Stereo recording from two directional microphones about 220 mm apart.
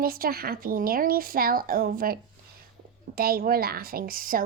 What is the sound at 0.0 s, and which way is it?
A woman's voice, 40° right (ahead or behind).